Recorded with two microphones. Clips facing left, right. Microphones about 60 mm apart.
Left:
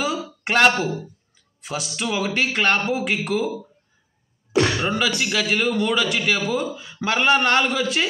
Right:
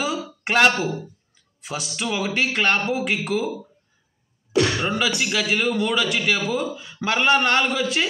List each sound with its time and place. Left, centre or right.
0.0 s a sound: centre
1.6 s a man's voice: centre
4.7 s a man's voice: centre